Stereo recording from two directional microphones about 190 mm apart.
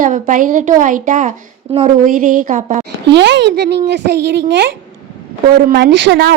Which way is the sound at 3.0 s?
65° right (ahead or behind).